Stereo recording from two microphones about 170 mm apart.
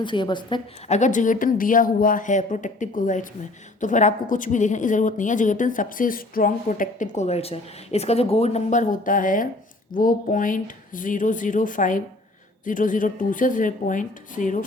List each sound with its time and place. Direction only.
0.0 s a woman's voice: 25° left (ahead or behind)
0.9 s a woman's voice: 45° left (ahead or behind)